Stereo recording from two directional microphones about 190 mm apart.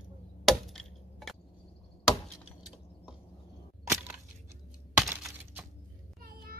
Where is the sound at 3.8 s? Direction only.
15° right (ahead or behind).